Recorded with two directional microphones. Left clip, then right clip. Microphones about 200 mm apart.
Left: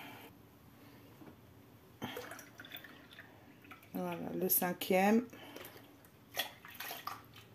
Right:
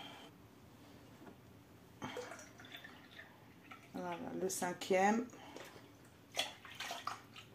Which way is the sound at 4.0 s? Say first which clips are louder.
Left 3 dB; 50° left (ahead or behind).